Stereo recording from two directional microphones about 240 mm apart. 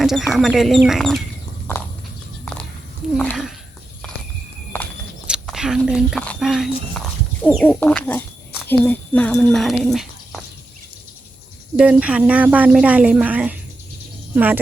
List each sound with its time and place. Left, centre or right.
0.0 s speech: centre
3.2 s speech: centre
5.3 s speech: centre
11.8 s speech: centre